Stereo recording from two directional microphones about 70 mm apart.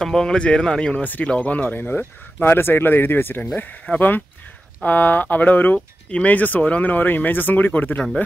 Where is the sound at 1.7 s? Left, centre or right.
Left.